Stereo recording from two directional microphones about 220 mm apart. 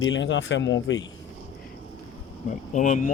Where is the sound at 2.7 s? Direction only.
35° left (ahead or behind).